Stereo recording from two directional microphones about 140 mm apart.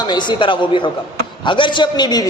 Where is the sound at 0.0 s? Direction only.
30° left (ahead or behind).